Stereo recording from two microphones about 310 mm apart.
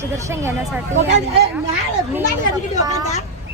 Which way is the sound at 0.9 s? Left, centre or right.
Right.